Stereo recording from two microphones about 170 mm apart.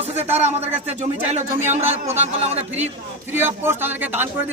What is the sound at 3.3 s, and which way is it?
A man's voice, 10° right (ahead or behind).